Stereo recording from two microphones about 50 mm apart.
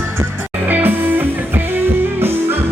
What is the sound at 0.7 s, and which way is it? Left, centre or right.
Music, right.